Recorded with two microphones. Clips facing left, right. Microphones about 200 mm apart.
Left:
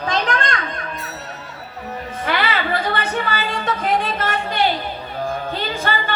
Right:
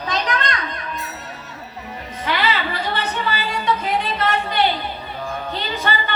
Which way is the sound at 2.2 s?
50° left (ahead or behind).